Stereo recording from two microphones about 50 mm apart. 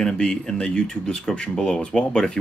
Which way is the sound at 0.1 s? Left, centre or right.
Centre.